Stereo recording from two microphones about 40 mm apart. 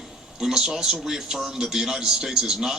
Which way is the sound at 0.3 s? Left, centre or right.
Centre.